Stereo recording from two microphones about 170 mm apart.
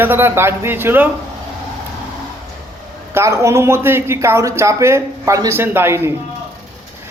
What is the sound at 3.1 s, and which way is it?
Speech, 15° right (ahead or behind).